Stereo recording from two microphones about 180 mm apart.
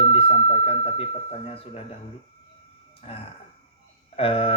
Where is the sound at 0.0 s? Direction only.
30° left (ahead or behind).